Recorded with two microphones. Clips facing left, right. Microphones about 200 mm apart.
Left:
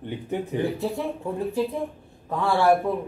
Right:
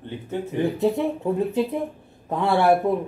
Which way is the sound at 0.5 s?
20° right (ahead or behind).